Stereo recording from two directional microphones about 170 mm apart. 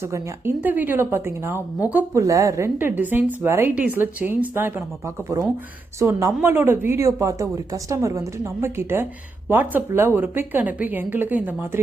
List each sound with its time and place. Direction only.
0.0 s speech: 15° right (ahead or behind)